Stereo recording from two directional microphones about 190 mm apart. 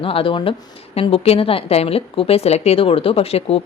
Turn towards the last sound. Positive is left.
turn(degrees=30)  # may be behind; listen again after turning